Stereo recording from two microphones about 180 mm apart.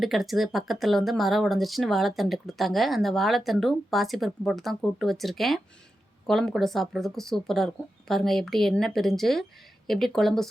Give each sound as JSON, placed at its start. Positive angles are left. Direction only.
{"t": 0.0, "sound": "speech", "side_deg": 0}